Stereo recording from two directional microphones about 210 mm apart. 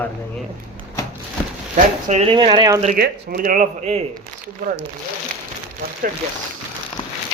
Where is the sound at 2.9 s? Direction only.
50° right (ahead or behind); by 4.0 s 30° right (ahead or behind).